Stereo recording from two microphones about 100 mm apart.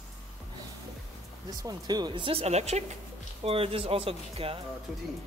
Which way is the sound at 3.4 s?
75° right (ahead or behind).